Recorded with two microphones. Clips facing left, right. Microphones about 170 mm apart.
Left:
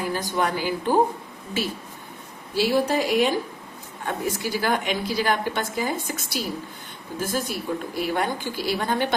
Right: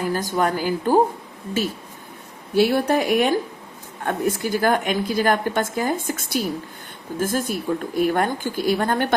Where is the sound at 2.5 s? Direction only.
55° right (ahead or behind).